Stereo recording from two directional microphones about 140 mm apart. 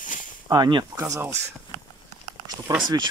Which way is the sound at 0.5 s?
30° right (ahead or behind).